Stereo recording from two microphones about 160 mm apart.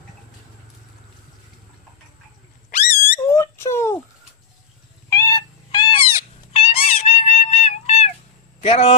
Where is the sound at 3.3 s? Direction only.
15° left (ahead or behind).